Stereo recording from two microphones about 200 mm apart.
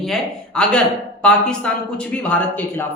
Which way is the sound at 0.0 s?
5° left (ahead or behind).